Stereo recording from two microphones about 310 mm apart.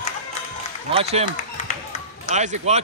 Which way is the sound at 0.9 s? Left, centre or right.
Centre.